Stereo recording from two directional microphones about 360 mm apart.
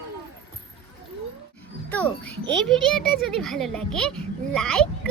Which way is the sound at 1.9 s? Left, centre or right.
Centre.